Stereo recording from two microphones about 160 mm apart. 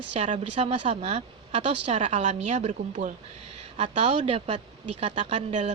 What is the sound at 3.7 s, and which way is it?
Speech, 40° right (ahead or behind).